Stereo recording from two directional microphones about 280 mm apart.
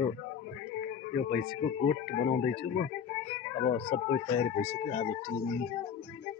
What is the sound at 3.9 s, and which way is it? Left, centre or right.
Speech, centre.